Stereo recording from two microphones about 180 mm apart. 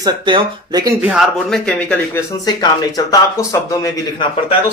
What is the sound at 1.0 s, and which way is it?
Speech, 5° right (ahead or behind).